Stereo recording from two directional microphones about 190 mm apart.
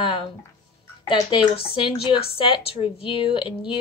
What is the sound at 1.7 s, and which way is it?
Speech, 25° left (ahead or behind).